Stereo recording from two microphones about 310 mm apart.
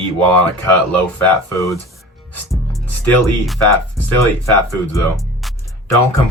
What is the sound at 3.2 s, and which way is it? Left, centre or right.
Speech, centre.